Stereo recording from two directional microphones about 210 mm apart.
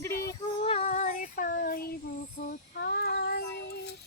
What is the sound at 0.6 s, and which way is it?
Child singing, 30° left (ahead or behind).